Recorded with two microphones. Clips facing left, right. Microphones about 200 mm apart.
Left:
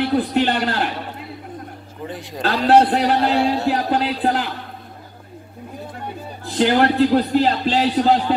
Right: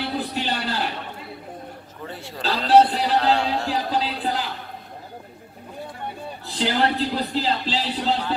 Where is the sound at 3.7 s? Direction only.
60° left (ahead or behind).